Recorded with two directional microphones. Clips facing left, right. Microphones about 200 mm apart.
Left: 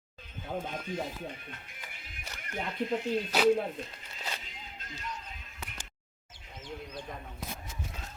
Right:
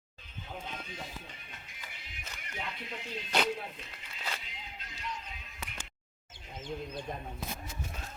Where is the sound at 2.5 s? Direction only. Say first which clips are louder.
Left 10 dB; 45° left (ahead or behind).